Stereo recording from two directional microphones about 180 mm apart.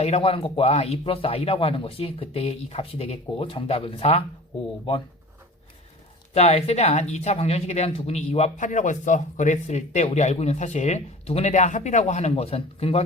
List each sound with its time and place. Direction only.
0.0 s speech: 35° left (ahead or behind)
6.3 s speech: 35° left (ahead or behind)